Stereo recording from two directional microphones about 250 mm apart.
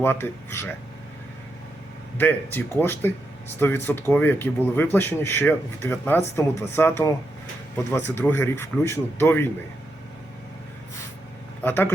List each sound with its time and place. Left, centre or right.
0.0 s speech: centre
2.1 s speech: centre
11.6 s speech: centre